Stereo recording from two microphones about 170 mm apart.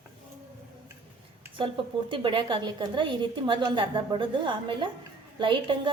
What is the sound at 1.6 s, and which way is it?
A woman's voice, 30° right (ahead or behind).